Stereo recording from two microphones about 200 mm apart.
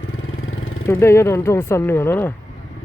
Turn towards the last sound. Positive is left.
turn(degrees=10)  # may be behind; listen again after turning